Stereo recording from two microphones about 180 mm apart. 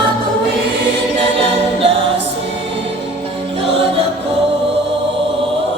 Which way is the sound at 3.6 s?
30° right (ahead or behind).